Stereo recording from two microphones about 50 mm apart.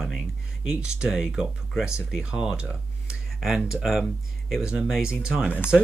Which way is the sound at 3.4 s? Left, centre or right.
Centre.